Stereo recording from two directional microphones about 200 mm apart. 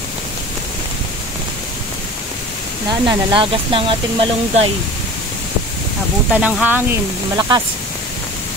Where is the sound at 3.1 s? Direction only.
25° right (ahead or behind).